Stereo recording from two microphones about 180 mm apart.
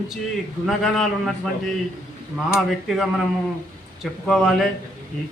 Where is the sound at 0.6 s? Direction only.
Centre (ahead or behind).